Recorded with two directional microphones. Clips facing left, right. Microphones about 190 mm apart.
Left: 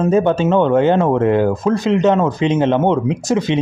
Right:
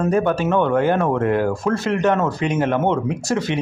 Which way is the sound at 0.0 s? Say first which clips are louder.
Left 4 dB; 20° left (ahead or behind).